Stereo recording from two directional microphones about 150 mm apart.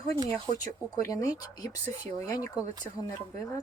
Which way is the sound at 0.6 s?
20° left (ahead or behind).